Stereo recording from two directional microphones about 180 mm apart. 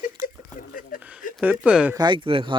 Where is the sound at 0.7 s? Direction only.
50° left (ahead or behind).